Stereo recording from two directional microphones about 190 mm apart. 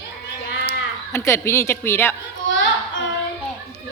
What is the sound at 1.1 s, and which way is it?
A woman's voice, 15° left (ahead or behind).